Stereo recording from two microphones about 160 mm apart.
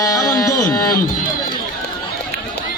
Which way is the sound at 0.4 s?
25° left (ahead or behind).